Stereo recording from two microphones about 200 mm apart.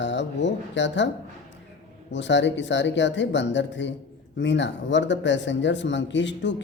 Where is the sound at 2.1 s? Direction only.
65° left (ahead or behind).